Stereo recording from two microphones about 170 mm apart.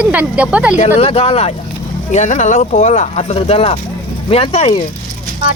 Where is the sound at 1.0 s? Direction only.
35° left (ahead or behind).